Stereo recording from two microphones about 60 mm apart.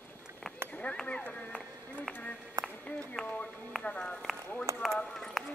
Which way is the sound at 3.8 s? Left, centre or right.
Centre.